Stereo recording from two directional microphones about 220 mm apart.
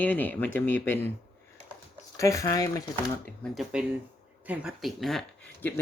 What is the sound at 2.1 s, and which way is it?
Speech, 15° left (ahead or behind).